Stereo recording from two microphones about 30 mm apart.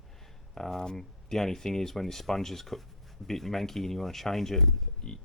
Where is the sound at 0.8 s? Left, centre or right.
Left; by 4.6 s centre.